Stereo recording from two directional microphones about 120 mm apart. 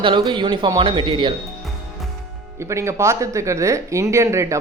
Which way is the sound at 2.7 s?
25° right (ahead or behind).